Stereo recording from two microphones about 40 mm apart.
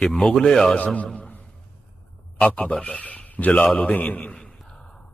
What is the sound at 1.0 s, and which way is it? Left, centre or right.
Speech, left.